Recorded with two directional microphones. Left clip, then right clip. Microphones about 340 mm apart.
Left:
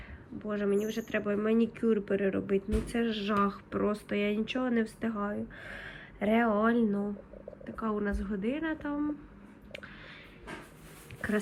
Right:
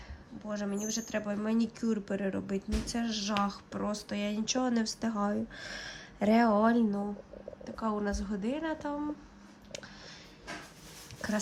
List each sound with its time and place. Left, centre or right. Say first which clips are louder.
0.4 s speech: left 6 dB; centre